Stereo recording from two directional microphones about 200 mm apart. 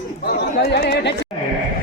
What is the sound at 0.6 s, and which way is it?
Speech, 55° left (ahead or behind).